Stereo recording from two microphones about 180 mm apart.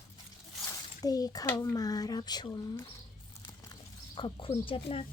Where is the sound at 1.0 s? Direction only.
20° left (ahead or behind).